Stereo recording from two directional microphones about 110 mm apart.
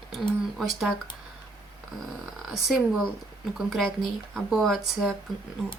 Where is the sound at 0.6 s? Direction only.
Centre (ahead or behind).